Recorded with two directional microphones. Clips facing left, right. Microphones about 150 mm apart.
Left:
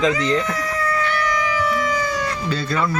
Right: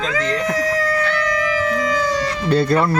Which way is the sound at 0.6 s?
90° right.